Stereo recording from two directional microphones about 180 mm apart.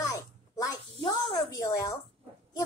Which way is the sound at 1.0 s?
30° left (ahead or behind).